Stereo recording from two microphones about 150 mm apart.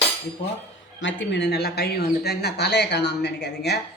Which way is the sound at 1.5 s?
90° left.